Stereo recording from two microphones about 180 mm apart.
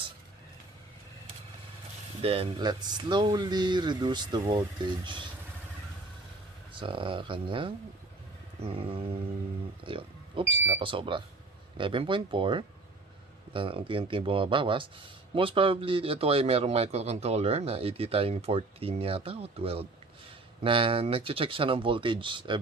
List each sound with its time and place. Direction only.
2.2 s speech: 30° right (ahead or behind)
6.7 s a man's voice: 30° right (ahead or behind)